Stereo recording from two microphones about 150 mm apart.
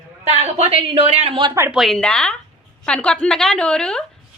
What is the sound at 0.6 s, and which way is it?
Speech, 40° right (ahead or behind).